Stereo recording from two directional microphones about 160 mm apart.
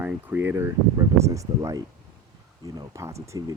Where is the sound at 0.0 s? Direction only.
10° right (ahead or behind).